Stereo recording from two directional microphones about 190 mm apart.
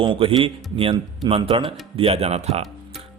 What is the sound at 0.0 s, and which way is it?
A man's voice, 30° right (ahead or behind).